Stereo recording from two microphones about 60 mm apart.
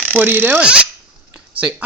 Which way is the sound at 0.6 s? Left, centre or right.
Centre.